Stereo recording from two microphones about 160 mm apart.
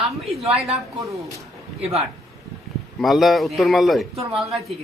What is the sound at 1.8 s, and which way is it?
Speech, 40° right (ahead or behind).